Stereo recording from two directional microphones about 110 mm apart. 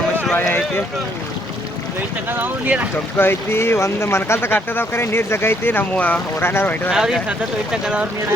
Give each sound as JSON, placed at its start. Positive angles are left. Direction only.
{"t": 0.2, "sound": "a sound", "side_deg": 15}
{"t": 2.3, "sound": "speech", "side_deg": -15}
{"t": 3.2, "sound": "speech", "side_deg": 20}
{"t": 6.9, "sound": "speech", "side_deg": -5}